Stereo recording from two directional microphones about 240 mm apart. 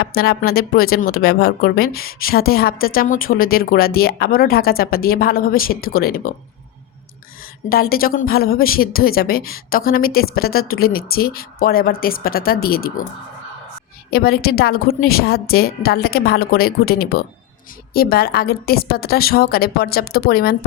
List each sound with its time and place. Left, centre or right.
0.0 s speech: left
7.7 s speech: left
14.1 s speech: left